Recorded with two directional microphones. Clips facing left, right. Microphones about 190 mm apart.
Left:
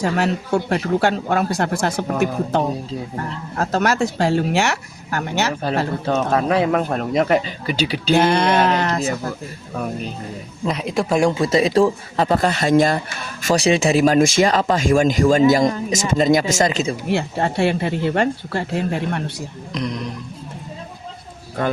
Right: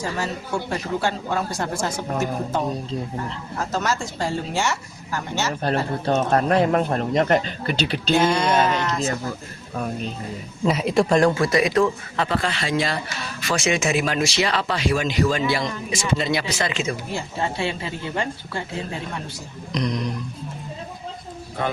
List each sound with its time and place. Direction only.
0.0 s speech: 65° left (ahead or behind)
6.1 s speech: centre (ahead or behind)
8.1 s speech: 60° left (ahead or behind)
10.7 s speech: centre (ahead or behind)
11.3 s speech: 20° left (ahead or behind); by 16.9 s 40° left (ahead or behind)
17.1 s speech: 65° left (ahead or behind)
19.7 s speech: 5° left (ahead or behind)